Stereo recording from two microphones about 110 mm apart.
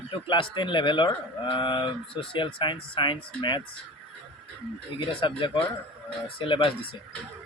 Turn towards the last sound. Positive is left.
turn(degrees=50)  # may be behind; listen again after turning